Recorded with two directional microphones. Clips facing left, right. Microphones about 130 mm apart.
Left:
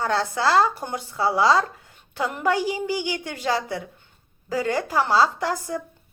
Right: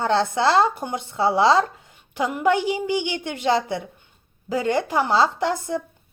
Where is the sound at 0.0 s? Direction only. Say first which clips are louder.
Right 3 dB; 25° right (ahead or behind).